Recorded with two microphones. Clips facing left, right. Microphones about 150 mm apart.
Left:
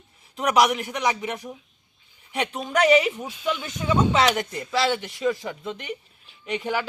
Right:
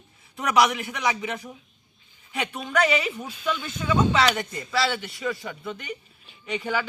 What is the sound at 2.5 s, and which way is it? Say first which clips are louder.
Speech: left 5 dB; 15° left (ahead or behind).